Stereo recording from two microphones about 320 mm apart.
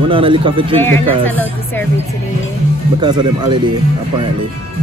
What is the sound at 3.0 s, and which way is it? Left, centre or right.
Speech, centre.